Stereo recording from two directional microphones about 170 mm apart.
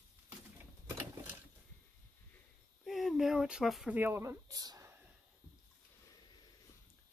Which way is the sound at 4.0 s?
15° right (ahead or behind).